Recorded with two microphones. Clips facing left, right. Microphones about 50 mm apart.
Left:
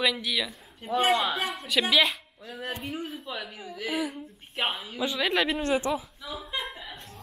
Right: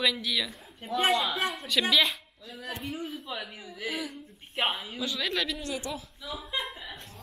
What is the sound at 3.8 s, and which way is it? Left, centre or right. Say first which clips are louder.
Speech: left 4 dB; centre.